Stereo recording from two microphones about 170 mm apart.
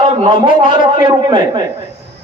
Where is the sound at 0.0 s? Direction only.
30° right (ahead or behind).